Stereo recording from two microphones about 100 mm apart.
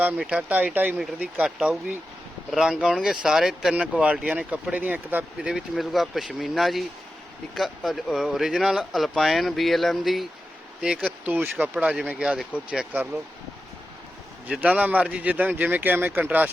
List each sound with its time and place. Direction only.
0.2 s speech: 10° right (ahead or behind)
0.9 s speech: 5° right (ahead or behind)
5.5 s speech: 5° right (ahead or behind)
14.4 s speech: 10° right (ahead or behind)